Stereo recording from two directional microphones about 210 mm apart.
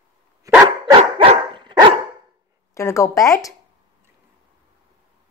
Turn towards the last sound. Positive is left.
turn(degrees=15)  # may be behind; listen again after turning